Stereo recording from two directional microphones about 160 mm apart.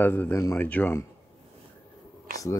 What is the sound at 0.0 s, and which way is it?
Speech, 15° left (ahead or behind).